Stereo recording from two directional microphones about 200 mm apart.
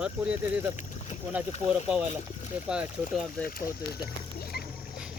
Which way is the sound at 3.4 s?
45° left (ahead or behind).